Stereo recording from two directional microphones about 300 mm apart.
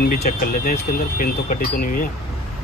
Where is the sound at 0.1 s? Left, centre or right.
Left.